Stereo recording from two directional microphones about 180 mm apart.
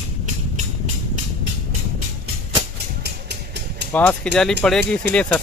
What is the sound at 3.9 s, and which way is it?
Speech, 10° left (ahead or behind).